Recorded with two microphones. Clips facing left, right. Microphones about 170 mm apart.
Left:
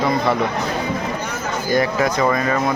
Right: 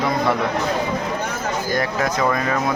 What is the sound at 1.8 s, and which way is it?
Speech, 5° left (ahead or behind).